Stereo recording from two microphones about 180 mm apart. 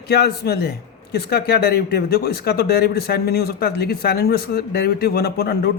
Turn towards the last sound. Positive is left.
turn(degrees=60)  # may be behind; listen again after turning